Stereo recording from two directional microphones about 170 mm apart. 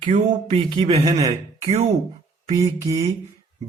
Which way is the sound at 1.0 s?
20° right (ahead or behind).